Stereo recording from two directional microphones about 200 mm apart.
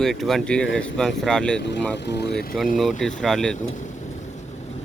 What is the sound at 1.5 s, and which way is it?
Speech, 60° left (ahead or behind).